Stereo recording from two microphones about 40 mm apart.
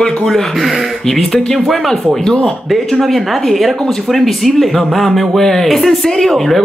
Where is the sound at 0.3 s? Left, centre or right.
Centre.